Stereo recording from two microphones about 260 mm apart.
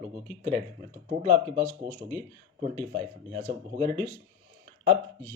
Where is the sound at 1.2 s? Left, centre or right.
Right.